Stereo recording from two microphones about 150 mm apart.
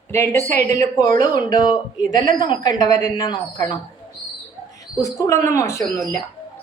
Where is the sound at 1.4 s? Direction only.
25° left (ahead or behind).